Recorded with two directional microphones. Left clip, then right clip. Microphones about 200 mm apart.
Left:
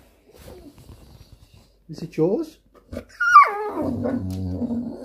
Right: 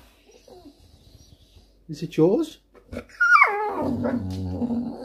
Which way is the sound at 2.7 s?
Centre (ahead or behind).